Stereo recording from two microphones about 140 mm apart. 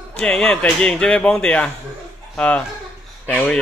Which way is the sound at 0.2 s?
10° left (ahead or behind).